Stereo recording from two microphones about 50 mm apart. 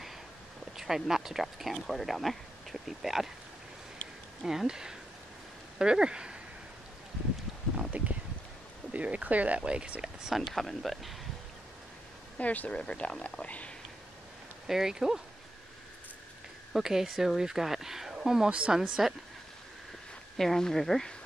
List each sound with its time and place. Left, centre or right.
0.7 s speech: centre
4.4 s speech: centre
7.9 s speech: right
10.5 s speech: centre
12.4 s speech: left
14.7 s speech: centre
16.7 s speech: centre
18.5 s speech: right
18.8 s speech: centre
20.3 s speech: centre